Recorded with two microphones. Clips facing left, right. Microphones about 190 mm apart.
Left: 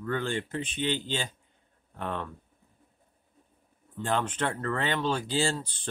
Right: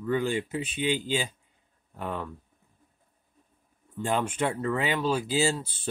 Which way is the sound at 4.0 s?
10° right (ahead or behind).